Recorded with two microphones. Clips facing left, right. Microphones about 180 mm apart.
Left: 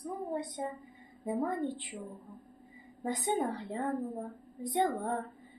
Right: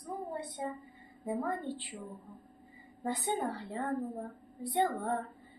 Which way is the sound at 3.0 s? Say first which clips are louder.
Left 2 dB; 20° left (ahead or behind).